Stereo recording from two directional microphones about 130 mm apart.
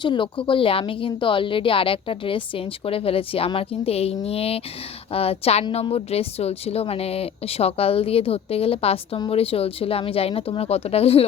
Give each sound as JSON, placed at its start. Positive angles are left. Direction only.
{"t": 0.0, "sound": "speech", "side_deg": 40}